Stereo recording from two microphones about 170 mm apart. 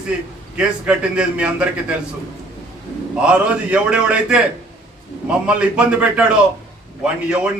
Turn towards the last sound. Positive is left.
turn(degrees=-5)  # may be behind; listen again after turning